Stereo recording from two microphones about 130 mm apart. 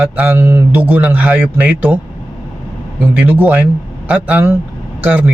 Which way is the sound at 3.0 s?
15° right (ahead or behind).